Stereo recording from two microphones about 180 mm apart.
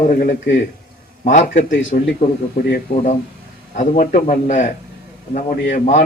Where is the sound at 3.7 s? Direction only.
45° left (ahead or behind).